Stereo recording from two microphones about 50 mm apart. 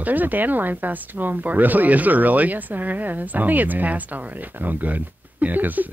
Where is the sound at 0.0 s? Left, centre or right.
Right.